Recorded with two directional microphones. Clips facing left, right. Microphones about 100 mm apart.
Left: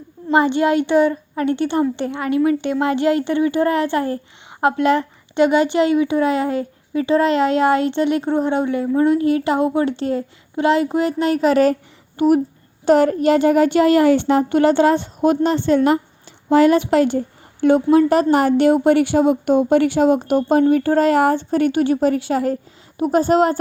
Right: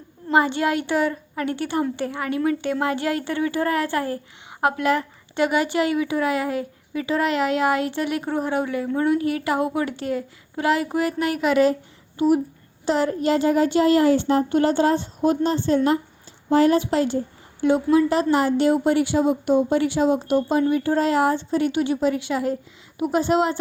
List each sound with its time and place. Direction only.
0.3 s a child's voice: 20° left (ahead or behind); by 23.6 s 45° left (ahead or behind)